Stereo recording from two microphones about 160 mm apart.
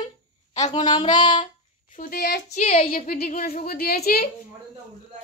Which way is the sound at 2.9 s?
60° left (ahead or behind).